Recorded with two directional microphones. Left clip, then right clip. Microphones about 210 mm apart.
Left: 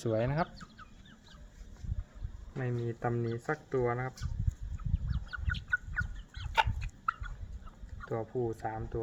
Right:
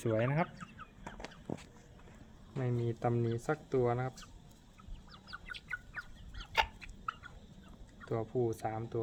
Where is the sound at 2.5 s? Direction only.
5° right (ahead or behind).